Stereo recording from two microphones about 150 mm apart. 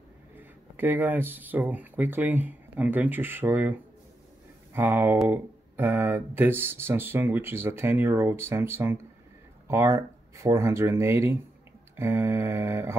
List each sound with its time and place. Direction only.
0.4 s speech: 10° right (ahead or behind)
4.7 s speech: 15° right (ahead or behind)